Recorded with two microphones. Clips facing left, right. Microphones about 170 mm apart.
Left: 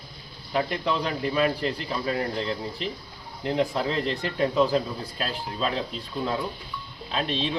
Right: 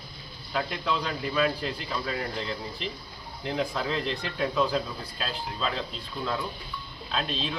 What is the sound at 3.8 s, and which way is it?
Speech, 40° left (ahead or behind).